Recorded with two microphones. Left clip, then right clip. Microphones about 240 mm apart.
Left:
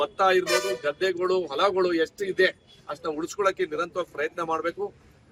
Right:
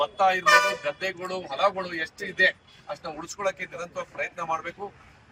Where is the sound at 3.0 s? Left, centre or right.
Centre.